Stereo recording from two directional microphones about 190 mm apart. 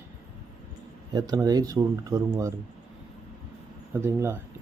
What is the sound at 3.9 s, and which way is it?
Speech, 10° right (ahead or behind).